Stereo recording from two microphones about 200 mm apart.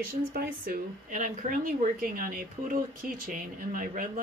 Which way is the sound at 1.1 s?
40° right (ahead or behind).